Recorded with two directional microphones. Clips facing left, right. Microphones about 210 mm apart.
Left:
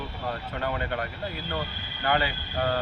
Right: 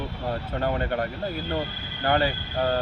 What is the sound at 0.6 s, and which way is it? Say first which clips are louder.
Speech: right 5 dB; 45° right (ahead or behind).